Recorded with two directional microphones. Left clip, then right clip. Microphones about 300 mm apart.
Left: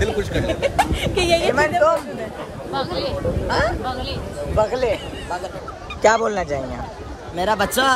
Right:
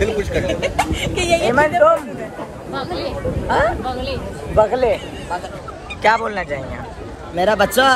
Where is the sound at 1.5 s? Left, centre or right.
Centre.